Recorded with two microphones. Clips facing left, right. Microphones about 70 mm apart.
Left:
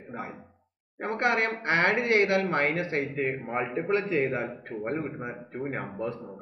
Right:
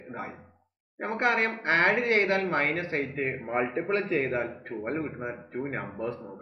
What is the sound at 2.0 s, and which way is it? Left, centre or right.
Speech, right.